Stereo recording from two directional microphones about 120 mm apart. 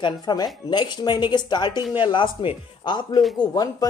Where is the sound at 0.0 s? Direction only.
35° left (ahead or behind).